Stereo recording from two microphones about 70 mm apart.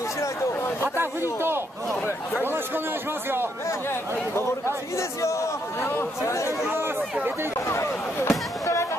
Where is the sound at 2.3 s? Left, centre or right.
Right.